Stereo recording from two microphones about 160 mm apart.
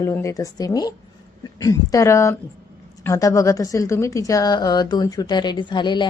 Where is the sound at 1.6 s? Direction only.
20° left (ahead or behind).